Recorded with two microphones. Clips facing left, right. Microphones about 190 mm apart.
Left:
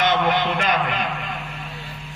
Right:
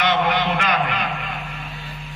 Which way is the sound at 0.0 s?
50° left (ahead or behind).